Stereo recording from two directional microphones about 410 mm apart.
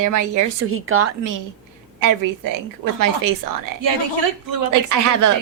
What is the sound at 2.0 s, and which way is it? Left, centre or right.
Speech, right.